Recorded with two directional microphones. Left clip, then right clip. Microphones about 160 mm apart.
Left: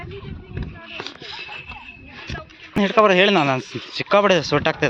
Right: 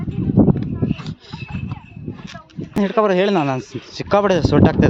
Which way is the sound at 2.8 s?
45° right (ahead or behind).